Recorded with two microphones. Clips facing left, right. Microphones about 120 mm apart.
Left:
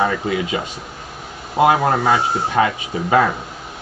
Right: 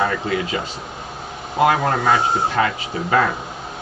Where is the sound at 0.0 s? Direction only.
20° left (ahead or behind).